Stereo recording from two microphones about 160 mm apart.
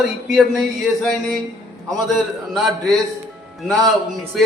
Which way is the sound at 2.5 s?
Centre (ahead or behind).